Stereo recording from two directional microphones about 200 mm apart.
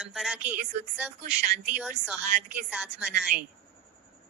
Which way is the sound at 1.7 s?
10° right (ahead or behind).